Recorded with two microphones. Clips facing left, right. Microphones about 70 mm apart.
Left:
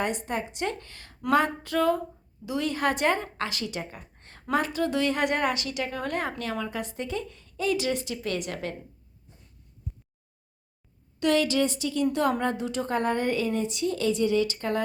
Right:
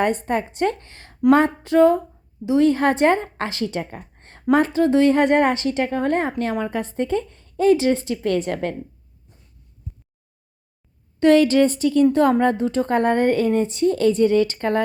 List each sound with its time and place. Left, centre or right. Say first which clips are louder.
0.0 s a woman's voice: right 8 dB; right
0.9 s speech: right 3 dB; right
1.3 s a sound: right 8 dB; right
2.5 s a woman's voice: right 10 dB; right
11.2 s a woman's voice: right 9 dB; right